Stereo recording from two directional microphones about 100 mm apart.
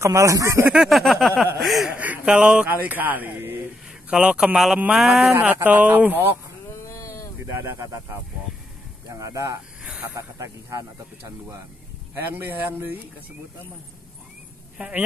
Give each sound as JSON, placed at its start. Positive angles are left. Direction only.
{"t": 0.0, "sound": "speech", "side_deg": -30}
{"t": 0.7, "sound": "a sound", "side_deg": -5}
{"t": 1.9, "sound": "speech", "side_deg": -15}
{"t": 4.1, "sound": "speech", "side_deg": -10}
{"t": 4.9, "sound": "a sound", "side_deg": 0}
{"t": 5.4, "sound": "speech", "side_deg": -15}
{"t": 6.7, "sound": "a sound", "side_deg": 30}
{"t": 7.4, "sound": "speech", "side_deg": -30}
{"t": 12.4, "sound": "speech", "side_deg": -20}
{"t": 14.8, "sound": "speech", "side_deg": -15}